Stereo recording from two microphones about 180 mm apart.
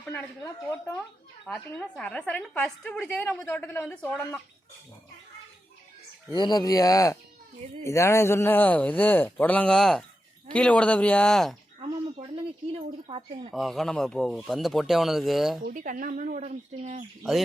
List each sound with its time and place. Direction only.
0.0 s a woman's voice: 10° left (ahead or behind)
6.3 s a woman's voice: 25° left (ahead or behind); by 11.5 s centre (ahead or behind)
13.1 s speech: 30° right (ahead or behind)
13.5 s speech: centre (ahead or behind)
15.6 s speech: 50° right (ahead or behind)